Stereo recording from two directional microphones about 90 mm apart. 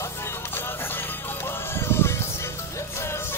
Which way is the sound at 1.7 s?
25° left (ahead or behind).